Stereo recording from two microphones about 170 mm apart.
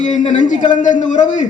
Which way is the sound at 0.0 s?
45° left (ahead or behind).